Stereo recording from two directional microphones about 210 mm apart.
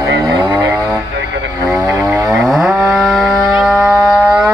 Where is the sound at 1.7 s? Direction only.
5° right (ahead or behind).